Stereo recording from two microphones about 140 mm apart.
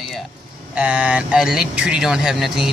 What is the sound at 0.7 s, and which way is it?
Speech, 10° right (ahead or behind).